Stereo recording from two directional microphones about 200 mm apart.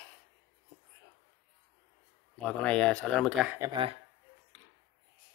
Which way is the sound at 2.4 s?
5° left (ahead or behind).